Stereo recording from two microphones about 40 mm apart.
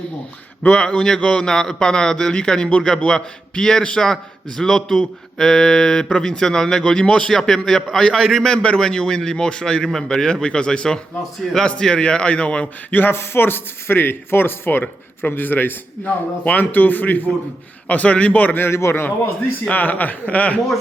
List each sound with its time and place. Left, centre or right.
0.6 s a man's voice: left
0.9 s a man's voice: centre
11.4 s a man's voice: centre
11.8 s speech: left
12.9 s speech: left
16.0 s a man's voice: left
17.8 s a man's voice: left
18.5 s a man's voice: left
19.7 s a man's voice: left